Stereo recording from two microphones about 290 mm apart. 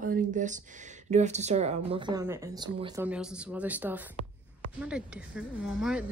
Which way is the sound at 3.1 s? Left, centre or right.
Centre.